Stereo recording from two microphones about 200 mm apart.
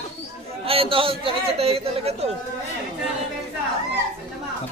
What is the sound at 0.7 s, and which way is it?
A man's voice, 30° right (ahead or behind).